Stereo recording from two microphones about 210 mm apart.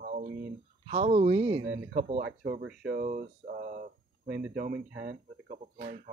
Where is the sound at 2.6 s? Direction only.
50° right (ahead or behind).